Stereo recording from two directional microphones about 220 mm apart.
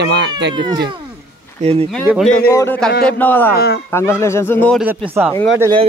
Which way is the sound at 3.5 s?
45° left (ahead or behind).